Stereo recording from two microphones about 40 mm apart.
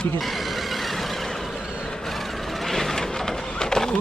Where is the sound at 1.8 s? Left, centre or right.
Centre.